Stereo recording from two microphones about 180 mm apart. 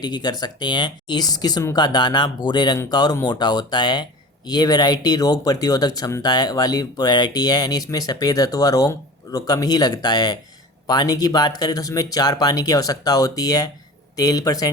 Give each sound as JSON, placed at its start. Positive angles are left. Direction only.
{"t": 0.0, "sound": "speech", "side_deg": 25}